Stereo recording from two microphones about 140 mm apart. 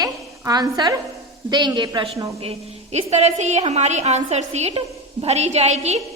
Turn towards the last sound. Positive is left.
turn(degrees=-50)  # may be behind; listen again after turning